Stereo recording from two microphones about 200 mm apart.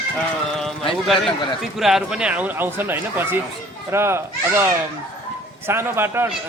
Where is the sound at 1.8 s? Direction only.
Centre (ahead or behind).